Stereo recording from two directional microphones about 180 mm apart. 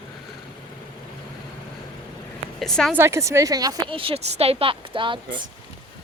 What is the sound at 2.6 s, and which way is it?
Speech, centre (ahead or behind).